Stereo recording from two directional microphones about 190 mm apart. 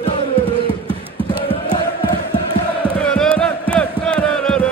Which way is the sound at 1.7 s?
20° left (ahead or behind).